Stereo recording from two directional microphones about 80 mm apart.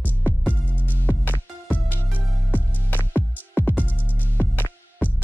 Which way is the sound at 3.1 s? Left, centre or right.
Left.